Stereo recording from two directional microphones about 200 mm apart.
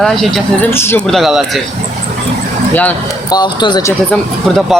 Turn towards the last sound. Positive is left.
turn(degrees=0)  # may be behind; listen again after turning